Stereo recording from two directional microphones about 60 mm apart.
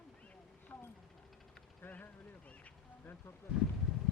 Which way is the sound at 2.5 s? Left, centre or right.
Left.